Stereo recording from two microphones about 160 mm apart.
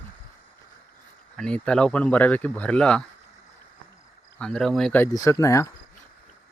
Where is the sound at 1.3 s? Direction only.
5° left (ahead or behind).